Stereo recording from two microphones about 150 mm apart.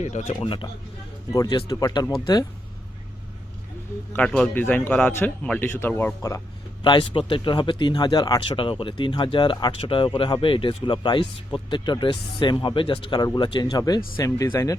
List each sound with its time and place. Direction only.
0.0 s speech: 50° left (ahead or behind)
0.3 s speech: 35° left (ahead or behind)
4.1 s a man's voice: 5° left (ahead or behind)
6.8 s speech: 35° left (ahead or behind)